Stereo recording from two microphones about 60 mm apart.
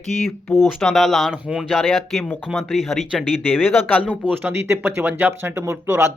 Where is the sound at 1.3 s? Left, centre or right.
Centre.